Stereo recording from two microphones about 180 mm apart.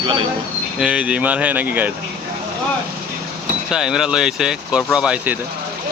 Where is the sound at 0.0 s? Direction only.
30° right (ahead or behind).